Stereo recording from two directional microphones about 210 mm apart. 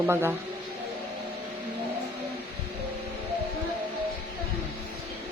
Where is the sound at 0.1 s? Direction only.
10° right (ahead or behind).